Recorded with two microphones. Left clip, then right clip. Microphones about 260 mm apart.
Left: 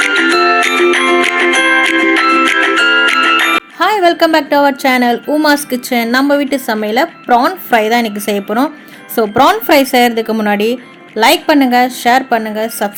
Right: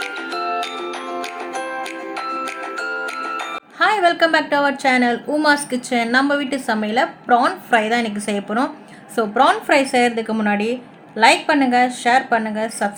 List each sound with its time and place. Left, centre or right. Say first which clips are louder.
0.1 s music: left 14 dB; left
3.8 s a woman's voice: left 3 dB; left